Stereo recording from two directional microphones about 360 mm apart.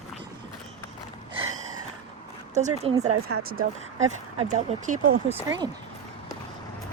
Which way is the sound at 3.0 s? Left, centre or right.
Right.